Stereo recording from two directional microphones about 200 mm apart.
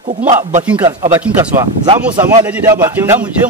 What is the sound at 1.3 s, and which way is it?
Speech, 5° right (ahead or behind).